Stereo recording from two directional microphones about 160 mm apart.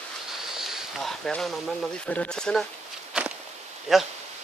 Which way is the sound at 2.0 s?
5° left (ahead or behind).